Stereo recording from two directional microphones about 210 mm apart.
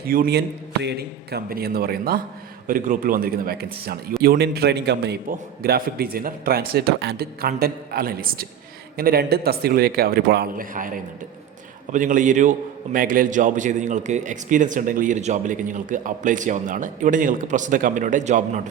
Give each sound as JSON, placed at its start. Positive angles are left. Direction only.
{"t": 0.0, "sound": "a man's voice", "side_deg": -45}